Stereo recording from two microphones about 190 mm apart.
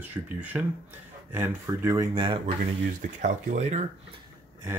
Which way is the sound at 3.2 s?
40° right (ahead or behind).